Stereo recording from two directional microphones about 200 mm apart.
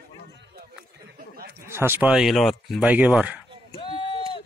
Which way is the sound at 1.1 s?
50° right (ahead or behind).